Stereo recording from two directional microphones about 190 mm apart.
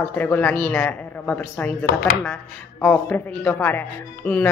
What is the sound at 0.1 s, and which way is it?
A woman's voice, 10° left (ahead or behind).